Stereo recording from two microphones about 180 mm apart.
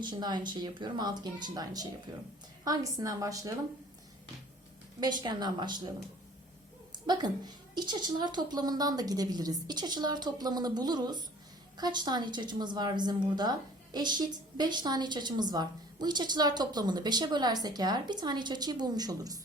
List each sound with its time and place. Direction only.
0.0 s a woman's voice: 25° right (ahead or behind)
4.9 s a woman's voice: 25° right (ahead or behind)
6.9 s a woman's voice: 25° right (ahead or behind)